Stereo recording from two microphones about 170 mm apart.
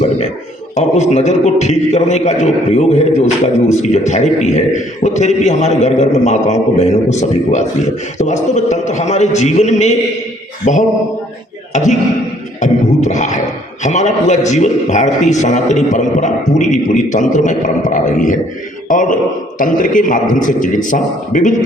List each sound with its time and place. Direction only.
0.8 s a man's voice: 40° left (ahead or behind)